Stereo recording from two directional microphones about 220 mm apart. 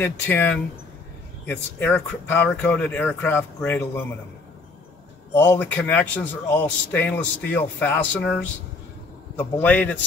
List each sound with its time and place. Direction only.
0.0 s speech: 10° left (ahead or behind)
5.3 s speech: 10° left (ahead or behind)
9.6 s speech: 5° left (ahead or behind)